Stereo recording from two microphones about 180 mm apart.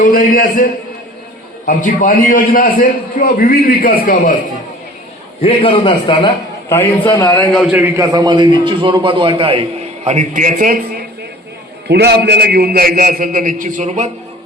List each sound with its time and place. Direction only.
0.0 s a man's voice: 50° left (ahead or behind)
5.4 s a man's voice: 30° left (ahead or behind)
6.7 s a man's voice: 10° left (ahead or behind)
7.7 s a man's voice: 10° right (ahead or behind); by 11.0 s 50° right (ahead or behind)
11.9 s a man's voice: 65° right (ahead or behind); by 14.1 s 40° right (ahead or behind)